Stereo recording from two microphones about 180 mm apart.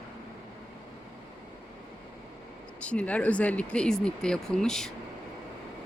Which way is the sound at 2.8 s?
5° left (ahead or behind).